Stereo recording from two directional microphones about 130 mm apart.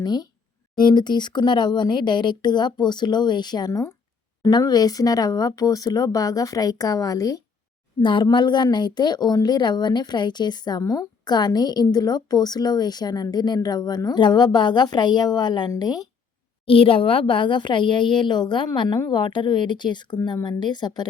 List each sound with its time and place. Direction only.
0.0 s speech: 30° left (ahead or behind)
8.0 s speech: 35° left (ahead or behind)
16.6 s speech: 45° left (ahead or behind)